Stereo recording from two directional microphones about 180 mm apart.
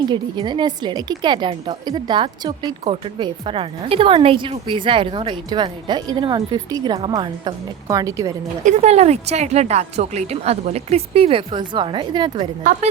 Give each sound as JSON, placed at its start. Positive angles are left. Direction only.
{"t": 0.1, "sound": "a woman's voice", "side_deg": -25}
{"t": 8.6, "sound": "a woman's voice", "side_deg": -40}